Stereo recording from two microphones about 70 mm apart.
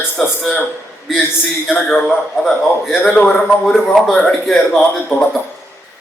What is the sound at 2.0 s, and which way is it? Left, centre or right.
Speech, centre.